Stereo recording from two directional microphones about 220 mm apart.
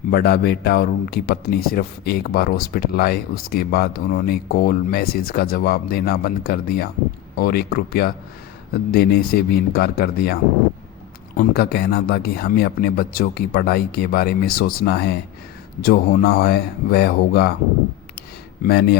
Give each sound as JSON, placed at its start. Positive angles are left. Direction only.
{"t": 0.1, "sound": "a man's voice", "side_deg": 45}
{"t": 11.3, "sound": "a man's voice", "side_deg": 45}
{"t": 18.6, "sound": "a man's voice", "side_deg": 45}